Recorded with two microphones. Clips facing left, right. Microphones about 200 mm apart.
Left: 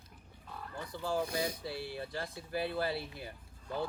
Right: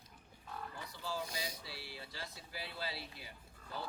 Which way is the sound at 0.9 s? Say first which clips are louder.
Left 9 dB; 50° left (ahead or behind).